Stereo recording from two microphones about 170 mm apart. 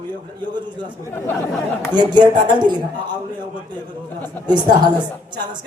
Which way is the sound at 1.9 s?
25° right (ahead or behind).